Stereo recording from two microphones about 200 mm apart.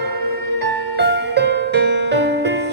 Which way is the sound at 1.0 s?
60° right (ahead or behind).